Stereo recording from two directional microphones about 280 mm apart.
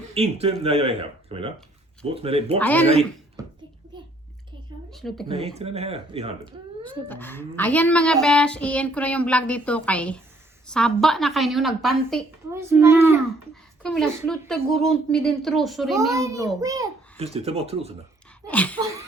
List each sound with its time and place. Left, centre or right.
0.1 s speech: right
2.6 s speech: centre
3.4 s a sound: centre
4.9 s a woman's voice: centre
5.5 s speech: right
7.1 s speech: centre
13.8 s speech: centre
16.1 s a child's voice: centre
18.4 s speech: centre